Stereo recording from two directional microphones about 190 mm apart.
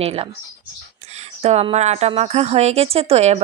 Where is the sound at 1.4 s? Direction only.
35° right (ahead or behind).